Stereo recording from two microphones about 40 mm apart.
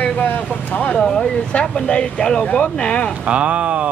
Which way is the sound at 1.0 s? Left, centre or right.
Centre.